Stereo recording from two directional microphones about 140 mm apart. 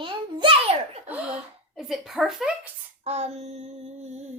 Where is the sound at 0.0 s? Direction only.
35° right (ahead or behind).